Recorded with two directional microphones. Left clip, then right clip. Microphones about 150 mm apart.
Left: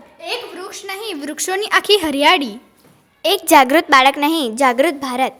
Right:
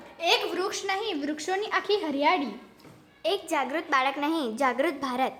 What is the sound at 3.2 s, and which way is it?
A woman's voice, 70° left (ahead or behind).